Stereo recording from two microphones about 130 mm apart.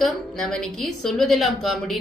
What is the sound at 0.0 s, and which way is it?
Speech, 5° left (ahead or behind).